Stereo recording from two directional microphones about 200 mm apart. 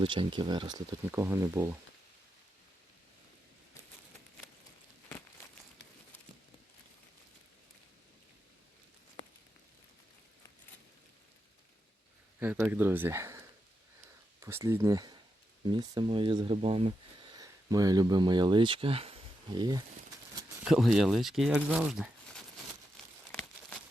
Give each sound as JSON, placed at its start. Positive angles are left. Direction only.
{"t": 0.0, "sound": "speech", "side_deg": -25}
{"t": 1.1, "sound": "speech", "side_deg": -10}
{"t": 12.4, "sound": "speech", "side_deg": -10}
{"t": 20.7, "sound": "speech", "side_deg": 0}